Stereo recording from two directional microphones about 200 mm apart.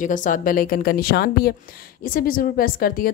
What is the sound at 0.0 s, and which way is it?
A woman's voice, 40° left (ahead or behind).